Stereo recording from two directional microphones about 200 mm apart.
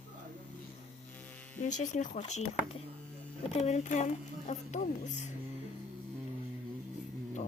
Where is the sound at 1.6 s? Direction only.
40° left (ahead or behind).